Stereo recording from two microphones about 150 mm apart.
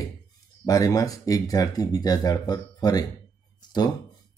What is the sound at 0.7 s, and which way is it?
Speech, 25° left (ahead or behind).